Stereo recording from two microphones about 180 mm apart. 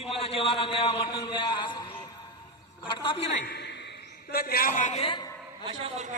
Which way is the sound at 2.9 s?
25° left (ahead or behind).